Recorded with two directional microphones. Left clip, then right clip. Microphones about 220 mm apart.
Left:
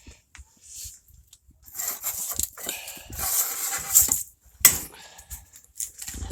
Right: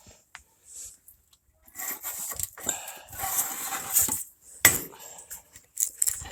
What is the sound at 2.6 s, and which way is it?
Dog, 20° left (ahead or behind).